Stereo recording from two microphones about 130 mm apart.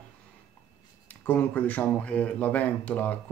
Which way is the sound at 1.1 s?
10° left (ahead or behind).